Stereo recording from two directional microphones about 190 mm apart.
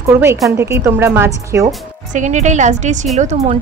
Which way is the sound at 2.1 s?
40° right (ahead or behind).